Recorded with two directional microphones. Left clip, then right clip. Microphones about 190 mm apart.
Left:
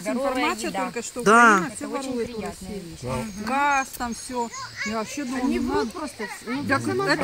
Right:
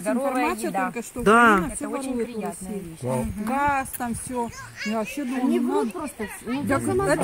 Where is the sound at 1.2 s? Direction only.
Centre (ahead or behind).